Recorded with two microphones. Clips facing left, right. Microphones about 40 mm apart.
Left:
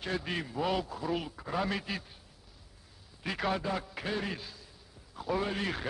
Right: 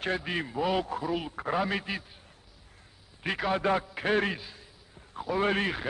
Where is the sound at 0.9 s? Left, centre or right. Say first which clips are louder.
Right 3 dB; right.